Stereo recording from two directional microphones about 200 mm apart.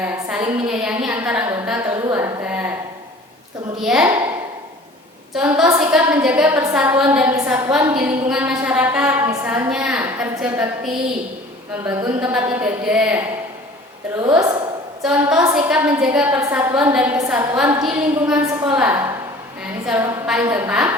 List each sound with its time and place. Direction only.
0.0 s a woman's voice: 5° right (ahead or behind)
1.9 s a sound: 15° right (ahead or behind)
3.8 s a woman's voice: 5° right (ahead or behind)
5.3 s a woman's voice: 5° right (ahead or behind)
11.9 s a woman's voice: 10° right (ahead or behind)
14.2 s a woman's voice: 15° right (ahead or behind)
15.0 s a woman's voice: 5° right (ahead or behind)